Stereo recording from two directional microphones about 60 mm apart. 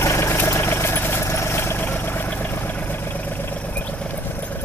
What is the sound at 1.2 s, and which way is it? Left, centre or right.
Vehicle, left.